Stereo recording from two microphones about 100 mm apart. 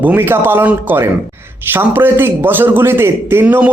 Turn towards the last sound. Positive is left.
turn(degrees=-20)  # may be behind; listen again after turning